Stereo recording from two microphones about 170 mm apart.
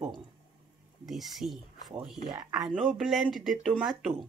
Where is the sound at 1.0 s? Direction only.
Centre (ahead or behind).